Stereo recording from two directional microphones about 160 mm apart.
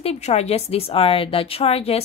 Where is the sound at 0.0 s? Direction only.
40° left (ahead or behind).